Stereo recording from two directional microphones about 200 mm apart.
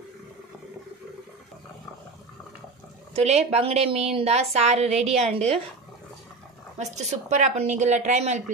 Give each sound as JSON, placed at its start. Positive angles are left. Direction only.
{"t": 3.2, "sound": "speech", "side_deg": -35}
{"t": 6.8, "sound": "speech", "side_deg": -35}